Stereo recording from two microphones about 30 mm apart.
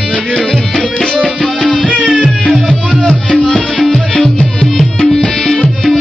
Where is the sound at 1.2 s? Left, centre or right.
Left.